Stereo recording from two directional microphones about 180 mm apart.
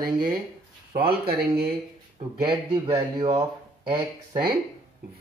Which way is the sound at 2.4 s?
25° right (ahead or behind).